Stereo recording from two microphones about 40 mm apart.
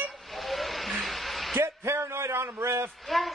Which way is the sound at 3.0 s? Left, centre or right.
Centre.